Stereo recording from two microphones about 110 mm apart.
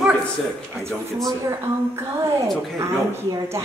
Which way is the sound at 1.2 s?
30° right (ahead or behind).